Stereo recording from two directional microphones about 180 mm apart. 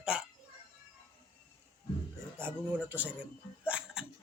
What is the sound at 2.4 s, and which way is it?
Speech, 10° right (ahead or behind).